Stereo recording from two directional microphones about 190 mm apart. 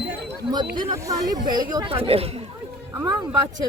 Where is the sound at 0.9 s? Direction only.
15° right (ahead or behind); by 2.4 s 30° right (ahead or behind).